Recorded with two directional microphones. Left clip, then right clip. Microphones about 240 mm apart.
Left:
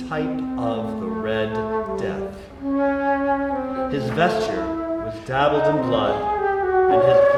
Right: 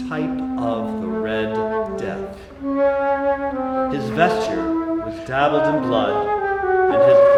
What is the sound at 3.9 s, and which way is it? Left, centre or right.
A man's voice, centre.